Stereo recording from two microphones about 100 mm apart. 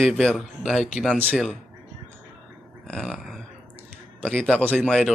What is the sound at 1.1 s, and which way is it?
Speech, 15° right (ahead or behind).